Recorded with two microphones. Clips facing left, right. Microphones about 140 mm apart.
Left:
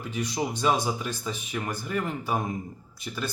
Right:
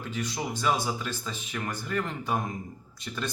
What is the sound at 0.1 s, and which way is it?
Speech, 15° left (ahead or behind).